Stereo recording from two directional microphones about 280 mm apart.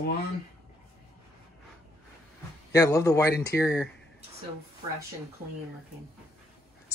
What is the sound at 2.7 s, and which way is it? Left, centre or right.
Speech, centre.